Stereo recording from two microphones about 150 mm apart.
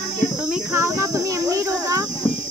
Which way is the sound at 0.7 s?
20° right (ahead or behind).